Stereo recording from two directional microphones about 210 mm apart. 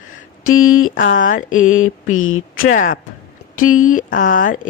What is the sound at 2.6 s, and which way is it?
Speech, 45° left (ahead or behind).